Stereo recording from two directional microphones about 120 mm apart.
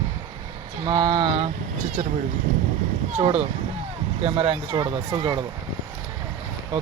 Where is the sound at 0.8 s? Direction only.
35° right (ahead or behind).